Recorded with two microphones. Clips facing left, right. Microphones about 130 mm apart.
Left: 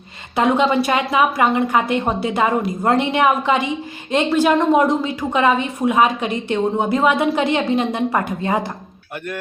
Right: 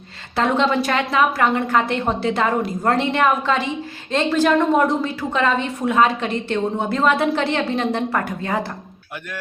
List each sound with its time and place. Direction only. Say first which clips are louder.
0.3 s a woman's voice: left 2 dB; 10° left (ahead or behind)